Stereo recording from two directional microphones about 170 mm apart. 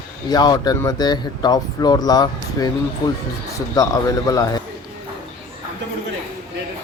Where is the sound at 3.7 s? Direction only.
20° left (ahead or behind).